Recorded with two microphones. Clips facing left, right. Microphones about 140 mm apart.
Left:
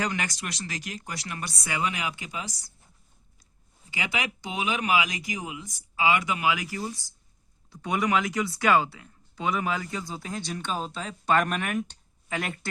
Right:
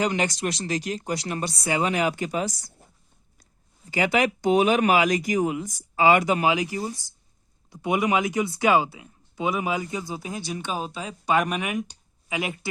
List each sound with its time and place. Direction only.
0.0 s speech: 25° right (ahead or behind); by 2.7 s 50° right (ahead or behind)
3.9 s speech: 45° right (ahead or behind); by 6.8 s 25° right (ahead or behind)
7.7 s speech: 15° right (ahead or behind)